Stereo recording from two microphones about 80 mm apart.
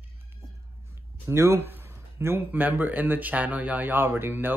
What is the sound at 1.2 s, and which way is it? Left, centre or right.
Speech, right.